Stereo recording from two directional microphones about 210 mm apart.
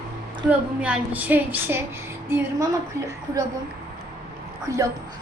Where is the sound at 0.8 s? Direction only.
5° right (ahead or behind).